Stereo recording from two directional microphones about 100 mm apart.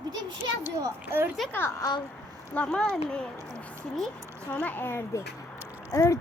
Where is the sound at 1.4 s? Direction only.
Centre (ahead or behind).